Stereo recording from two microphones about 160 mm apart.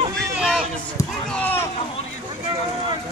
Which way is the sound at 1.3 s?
10° left (ahead or behind).